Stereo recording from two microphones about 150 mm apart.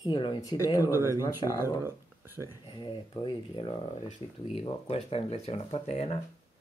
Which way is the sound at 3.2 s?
35° left (ahead or behind).